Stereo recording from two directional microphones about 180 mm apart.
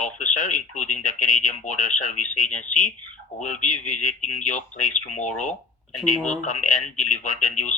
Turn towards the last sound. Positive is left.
turn(degrees=45)  # may be behind; listen again after turning